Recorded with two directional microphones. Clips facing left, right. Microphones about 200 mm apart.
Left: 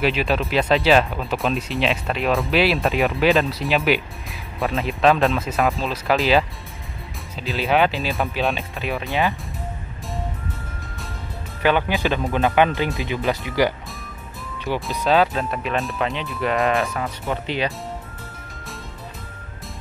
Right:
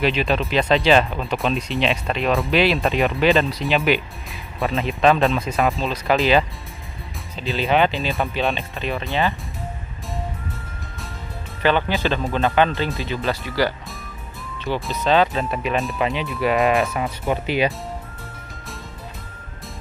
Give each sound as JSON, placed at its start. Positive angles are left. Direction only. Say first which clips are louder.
{"t": 0.0, "sound": "speech", "louder": "even", "side_deg": 5}
{"t": 11.6, "sound": "speech", "louder": "even", "side_deg": 10}
{"t": 14.9, "sound": "speech", "louder": "even", "side_deg": 5}